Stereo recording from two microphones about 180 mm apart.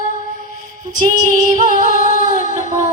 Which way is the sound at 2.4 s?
45° right (ahead or behind).